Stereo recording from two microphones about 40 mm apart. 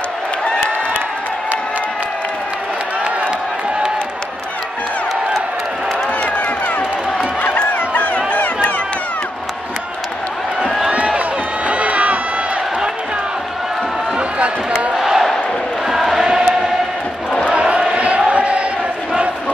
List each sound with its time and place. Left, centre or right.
7.4 s a sound: left
11.1 s run: right
15.0 s battle cry: centre
15.9 s chant: centre
16.2 s choir: centre
17.5 s chant: right